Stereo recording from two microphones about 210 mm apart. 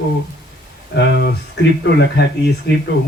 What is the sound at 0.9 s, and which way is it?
A man's voice, 55° left (ahead or behind).